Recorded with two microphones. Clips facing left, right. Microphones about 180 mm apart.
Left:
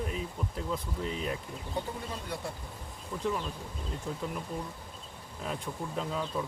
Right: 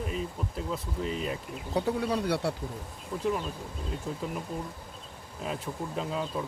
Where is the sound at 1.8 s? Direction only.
75° right (ahead or behind).